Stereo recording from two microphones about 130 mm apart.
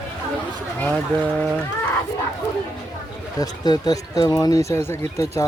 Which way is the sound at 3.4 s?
30° left (ahead or behind).